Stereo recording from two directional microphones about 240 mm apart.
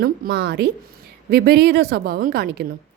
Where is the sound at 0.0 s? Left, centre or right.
Right.